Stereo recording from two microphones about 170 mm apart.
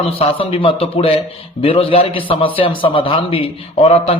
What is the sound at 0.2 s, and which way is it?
A man's voice, 30° left (ahead or behind).